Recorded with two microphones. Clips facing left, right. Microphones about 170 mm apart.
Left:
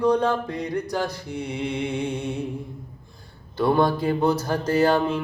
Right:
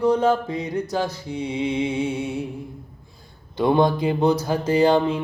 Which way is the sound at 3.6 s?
20° right (ahead or behind).